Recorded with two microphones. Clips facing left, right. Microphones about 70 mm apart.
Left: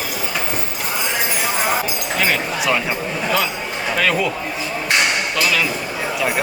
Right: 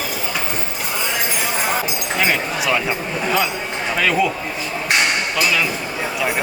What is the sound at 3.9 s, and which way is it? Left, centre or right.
Speech, centre.